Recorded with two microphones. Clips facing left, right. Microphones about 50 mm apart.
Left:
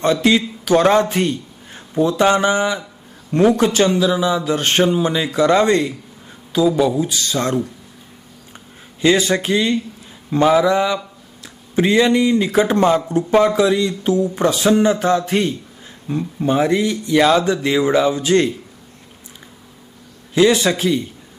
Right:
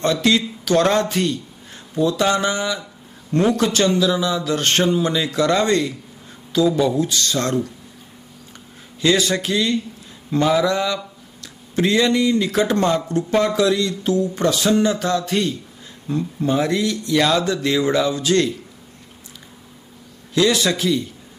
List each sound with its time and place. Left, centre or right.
0.0 s a man's voice: centre
9.0 s speech: left
20.3 s speech: left